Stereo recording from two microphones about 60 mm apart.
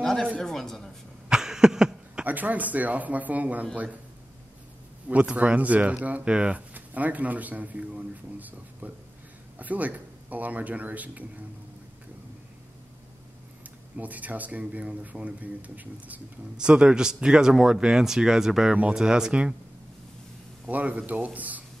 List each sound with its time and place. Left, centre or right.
0.0 s a sound: centre
0.4 s a man's voice: centre
1.3 s a sound: centre
2.2 s speech: right
5.0 s speech: right
13.9 s speech: right
16.5 s speech: centre
20.6 s speech: right